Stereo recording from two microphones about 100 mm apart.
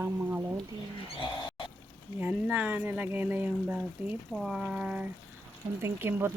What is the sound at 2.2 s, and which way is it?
Speech, 15° right (ahead or behind).